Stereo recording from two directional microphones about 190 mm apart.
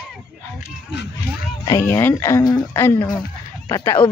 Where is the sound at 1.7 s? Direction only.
10° left (ahead or behind).